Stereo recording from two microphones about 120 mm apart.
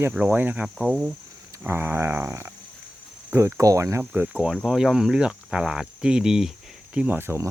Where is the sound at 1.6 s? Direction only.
15° right (ahead or behind).